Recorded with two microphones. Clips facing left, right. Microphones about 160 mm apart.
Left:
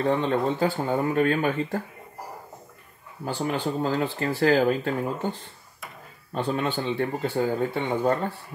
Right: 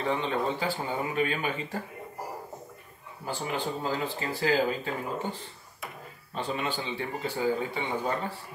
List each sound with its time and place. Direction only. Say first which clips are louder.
0.0 s speech: left 5 dB; 45° left (ahead or behind)
3.4 s speech: left 5 dB; 55° left (ahead or behind)
6.3 s speech: left 5 dB; 50° left (ahead or behind)